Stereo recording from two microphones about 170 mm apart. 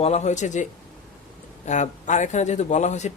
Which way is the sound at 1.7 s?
45° left (ahead or behind).